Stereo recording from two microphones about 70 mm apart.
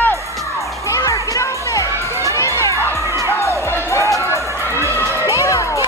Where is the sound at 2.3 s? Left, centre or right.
Left.